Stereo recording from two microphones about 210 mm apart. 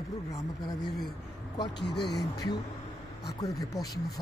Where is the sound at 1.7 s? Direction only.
55° left (ahead or behind).